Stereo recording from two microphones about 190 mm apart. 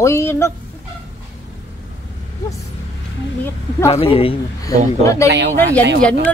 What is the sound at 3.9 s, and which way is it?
Speech, 30° left (ahead or behind).